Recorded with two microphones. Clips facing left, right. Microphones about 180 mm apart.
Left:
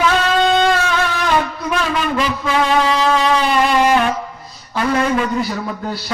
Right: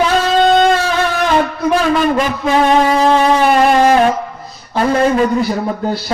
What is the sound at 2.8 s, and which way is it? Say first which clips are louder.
Music: right 5 dB; 50° right (ahead or behind).